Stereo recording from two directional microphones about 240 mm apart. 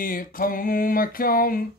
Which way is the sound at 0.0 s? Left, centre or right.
Left.